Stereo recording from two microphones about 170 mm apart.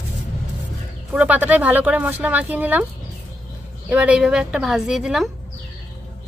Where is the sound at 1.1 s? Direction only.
10° right (ahead or behind).